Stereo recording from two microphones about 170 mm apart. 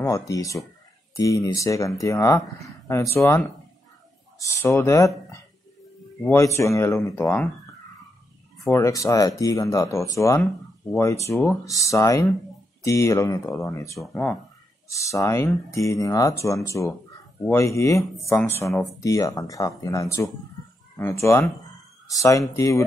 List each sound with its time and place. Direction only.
0.0 s speech: 20° left (ahead or behind)
8.6 s speech: 15° left (ahead or behind)
13.9 s speech: 5° left (ahead or behind)
14.9 s speech: 20° left (ahead or behind)